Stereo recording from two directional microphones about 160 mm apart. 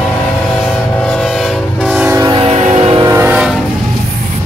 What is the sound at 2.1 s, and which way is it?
Train, 20° right (ahead or behind).